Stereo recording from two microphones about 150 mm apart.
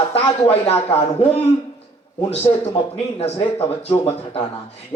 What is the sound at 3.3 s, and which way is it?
Speech, 35° left (ahead or behind).